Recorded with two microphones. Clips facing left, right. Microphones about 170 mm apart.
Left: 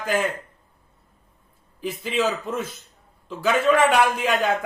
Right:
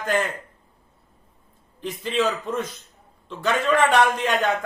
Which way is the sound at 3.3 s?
5° left (ahead or behind).